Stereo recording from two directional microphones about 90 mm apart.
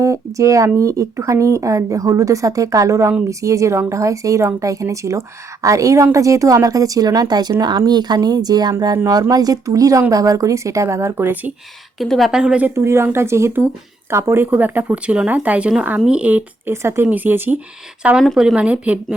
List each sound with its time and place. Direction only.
0.0 s speech: 35° right (ahead or behind)
11.9 s a woman's voice: centre (ahead or behind)
12.3 s a woman's voice: 10° right (ahead or behind)
12.6 s a woman's voice: 30° right (ahead or behind); by 16.4 s 15° right (ahead or behind)
16.6 s a woman's voice: 30° right (ahead or behind); by 18.9 s 15° right (ahead or behind)